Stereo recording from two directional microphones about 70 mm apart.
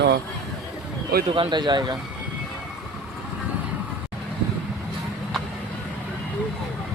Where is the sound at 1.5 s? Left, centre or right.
Right.